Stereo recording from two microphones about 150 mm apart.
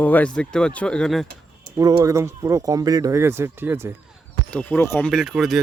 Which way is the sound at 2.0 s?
20° right (ahead or behind).